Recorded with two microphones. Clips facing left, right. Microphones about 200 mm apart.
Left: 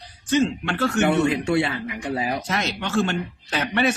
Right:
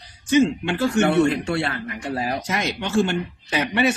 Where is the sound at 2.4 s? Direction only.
10° right (ahead or behind).